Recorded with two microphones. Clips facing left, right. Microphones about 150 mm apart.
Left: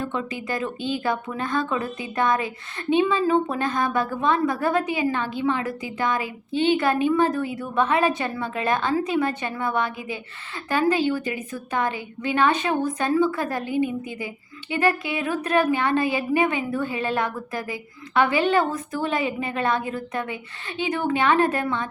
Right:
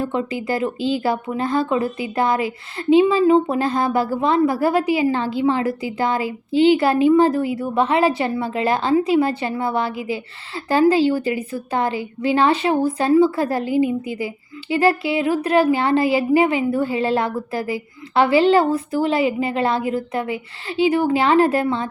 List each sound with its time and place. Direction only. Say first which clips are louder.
0.0 s a woman's voice: right 6 dB; 30° right (ahead or behind)